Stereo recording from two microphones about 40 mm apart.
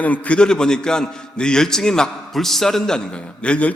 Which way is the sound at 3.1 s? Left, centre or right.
Left.